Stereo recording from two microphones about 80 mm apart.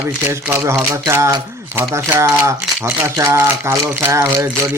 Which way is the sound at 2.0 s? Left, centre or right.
Right.